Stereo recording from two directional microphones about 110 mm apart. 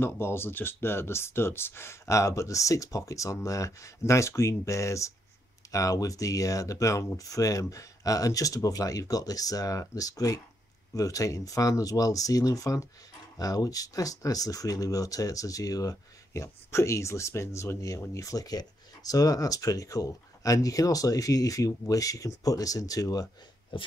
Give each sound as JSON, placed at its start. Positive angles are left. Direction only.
{"t": 0.0, "sound": "speech", "side_deg": 20}